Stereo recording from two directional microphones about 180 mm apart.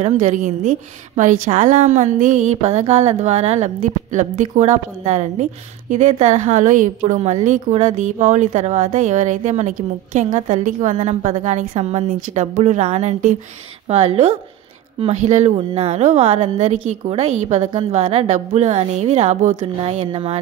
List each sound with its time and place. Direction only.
0.0 s a woman's voice: 45° right (ahead or behind)